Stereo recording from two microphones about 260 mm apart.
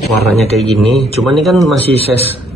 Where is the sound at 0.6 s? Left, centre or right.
Centre.